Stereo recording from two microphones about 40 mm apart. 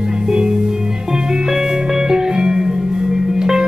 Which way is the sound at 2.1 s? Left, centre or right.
Centre.